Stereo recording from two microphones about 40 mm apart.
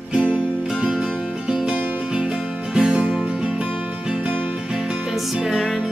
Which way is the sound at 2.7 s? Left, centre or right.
Right.